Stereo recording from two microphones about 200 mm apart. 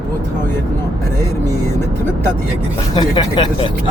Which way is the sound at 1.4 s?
10° left (ahead or behind).